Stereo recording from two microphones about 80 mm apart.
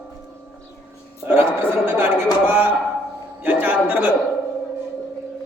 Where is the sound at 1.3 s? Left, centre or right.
Right.